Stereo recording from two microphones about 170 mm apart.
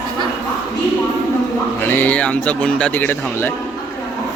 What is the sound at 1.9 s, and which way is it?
Speech, 10° left (ahead or behind).